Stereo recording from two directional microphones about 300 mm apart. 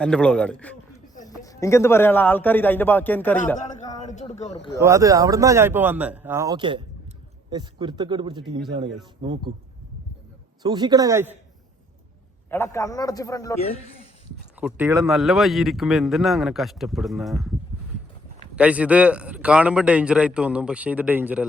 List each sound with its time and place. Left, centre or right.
0.0 s a man's voice: centre
3.6 s a man's voice: left
4.8 s speech: centre
10.6 s speech: centre
12.5 s a man's voice: centre
14.6 s speech: centre
18.5 s speech: centre